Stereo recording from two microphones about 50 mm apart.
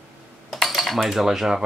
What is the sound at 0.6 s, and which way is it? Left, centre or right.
Cutlery, centre.